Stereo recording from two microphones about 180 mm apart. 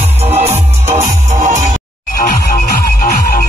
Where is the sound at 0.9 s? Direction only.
45° right (ahead or behind).